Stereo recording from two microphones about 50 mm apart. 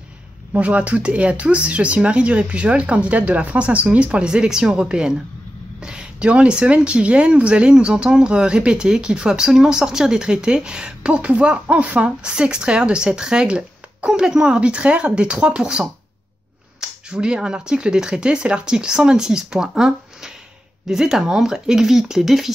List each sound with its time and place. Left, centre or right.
0.5 s speech: right
17.1 s speech: centre